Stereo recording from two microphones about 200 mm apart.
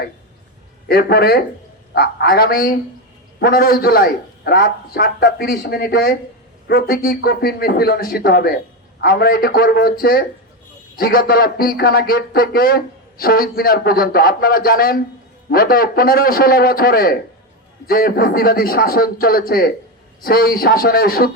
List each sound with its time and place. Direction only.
0.9 s a man's voice: 50° left (ahead or behind)